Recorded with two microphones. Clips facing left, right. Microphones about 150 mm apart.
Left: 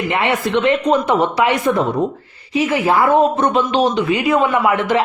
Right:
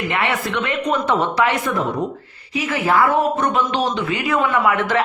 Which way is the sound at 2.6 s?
20° left (ahead or behind).